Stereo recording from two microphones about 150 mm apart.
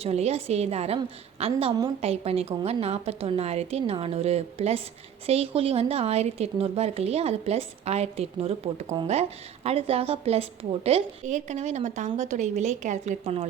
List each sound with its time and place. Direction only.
0.0 s a woman's voice: 45° right (ahead or behind)